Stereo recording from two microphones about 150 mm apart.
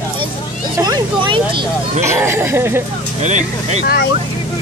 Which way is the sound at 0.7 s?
25° right (ahead or behind).